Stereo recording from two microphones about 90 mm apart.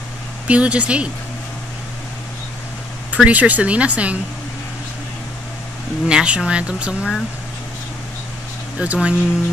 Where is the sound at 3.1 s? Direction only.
15° right (ahead or behind).